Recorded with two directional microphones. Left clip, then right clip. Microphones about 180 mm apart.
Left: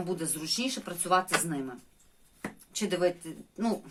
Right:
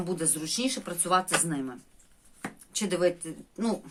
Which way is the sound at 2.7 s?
25° right (ahead or behind).